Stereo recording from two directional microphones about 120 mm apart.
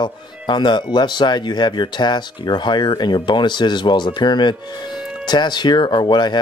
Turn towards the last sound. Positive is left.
turn(degrees=40)  # may be behind; listen again after turning